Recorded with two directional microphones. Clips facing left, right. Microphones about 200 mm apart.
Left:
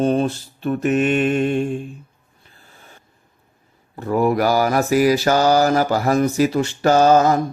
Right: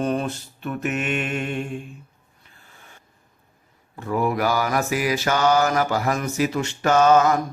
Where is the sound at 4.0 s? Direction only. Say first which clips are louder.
Left 5 dB; 35° left (ahead or behind).